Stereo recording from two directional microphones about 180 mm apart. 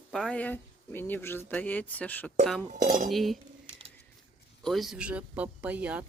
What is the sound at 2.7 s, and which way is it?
Speech, 45° right (ahead or behind).